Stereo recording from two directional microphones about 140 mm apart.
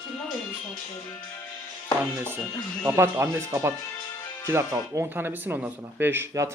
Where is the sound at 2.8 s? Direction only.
15° right (ahead or behind).